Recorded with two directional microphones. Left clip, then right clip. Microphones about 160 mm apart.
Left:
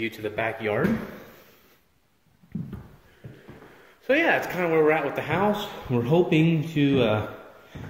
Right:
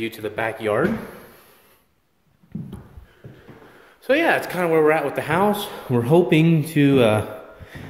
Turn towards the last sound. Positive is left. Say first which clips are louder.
# right 6 dB
turn(degrees=-45)  # may be behind; listen again after turning